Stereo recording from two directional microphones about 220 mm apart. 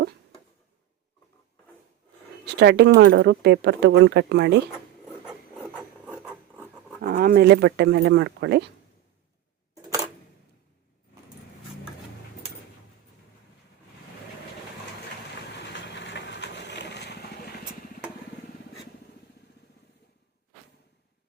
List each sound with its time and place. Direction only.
2.6 s speech: 50° right (ahead or behind)
6.1 s filing: 5° right (ahead or behind)
7.0 s speech: 45° right (ahead or behind)
15.6 s vehicle: 50° left (ahead or behind)